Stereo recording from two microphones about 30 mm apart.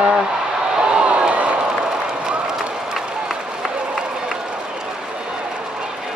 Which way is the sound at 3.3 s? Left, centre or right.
Centre.